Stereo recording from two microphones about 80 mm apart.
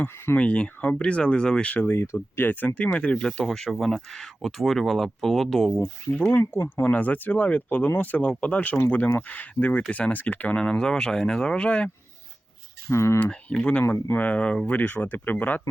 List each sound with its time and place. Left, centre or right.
0.3 s speech: centre
6.8 s speech: left
12.9 s speech: left
13.5 s speech: centre
13.8 s speech: left